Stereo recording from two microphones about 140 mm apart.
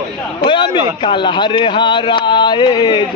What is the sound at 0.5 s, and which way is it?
Speech, 35° left (ahead or behind).